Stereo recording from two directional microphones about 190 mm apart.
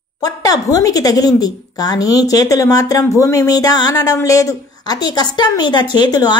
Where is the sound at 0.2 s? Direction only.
20° left (ahead or behind).